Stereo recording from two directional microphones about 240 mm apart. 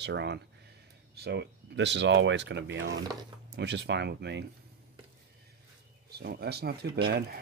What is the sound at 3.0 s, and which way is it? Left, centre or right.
Speech, centre.